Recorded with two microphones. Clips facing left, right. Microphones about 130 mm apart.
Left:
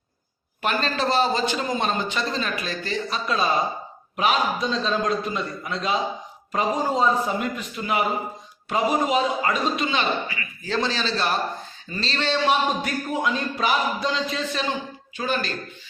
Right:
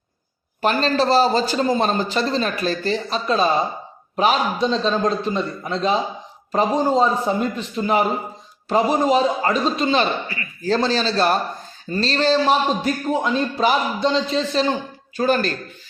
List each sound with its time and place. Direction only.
0.6 s a man's voice: 35° right (ahead or behind)